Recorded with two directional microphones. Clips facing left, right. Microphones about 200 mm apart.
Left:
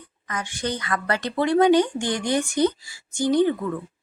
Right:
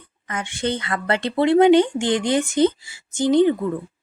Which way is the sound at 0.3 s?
25° right (ahead or behind).